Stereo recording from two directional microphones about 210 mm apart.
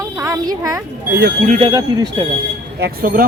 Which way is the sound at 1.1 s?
50° right (ahead or behind).